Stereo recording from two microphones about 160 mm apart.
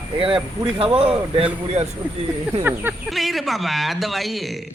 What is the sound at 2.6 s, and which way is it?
Speech, 10° right (ahead or behind).